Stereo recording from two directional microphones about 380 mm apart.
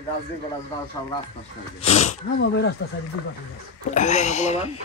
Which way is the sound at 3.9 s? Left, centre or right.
Centre.